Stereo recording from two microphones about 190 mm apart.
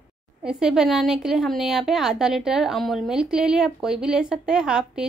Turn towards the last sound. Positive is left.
turn(degrees=-5)  # may be behind; listen again after turning